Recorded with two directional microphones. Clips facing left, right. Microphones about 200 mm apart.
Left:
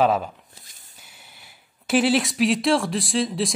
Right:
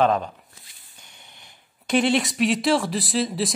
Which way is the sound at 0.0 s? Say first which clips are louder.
Even; 5° left (ahead or behind).